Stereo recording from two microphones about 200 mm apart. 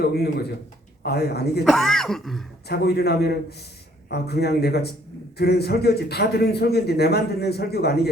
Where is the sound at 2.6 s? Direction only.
55° left (ahead or behind).